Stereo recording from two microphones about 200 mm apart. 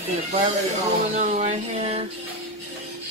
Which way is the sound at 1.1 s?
35° right (ahead or behind).